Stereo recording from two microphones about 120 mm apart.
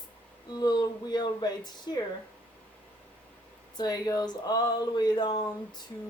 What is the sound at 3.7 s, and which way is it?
A woman's voice, 35° left (ahead or behind).